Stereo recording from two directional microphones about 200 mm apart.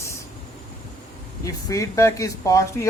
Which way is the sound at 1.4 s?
15° left (ahead or behind).